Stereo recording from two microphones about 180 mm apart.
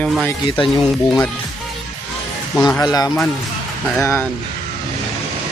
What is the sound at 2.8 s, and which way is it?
Speech, 20° left (ahead or behind).